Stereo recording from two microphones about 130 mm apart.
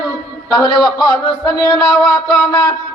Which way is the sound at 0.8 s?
35° left (ahead or behind).